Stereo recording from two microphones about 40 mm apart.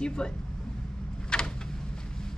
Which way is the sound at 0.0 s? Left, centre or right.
Left.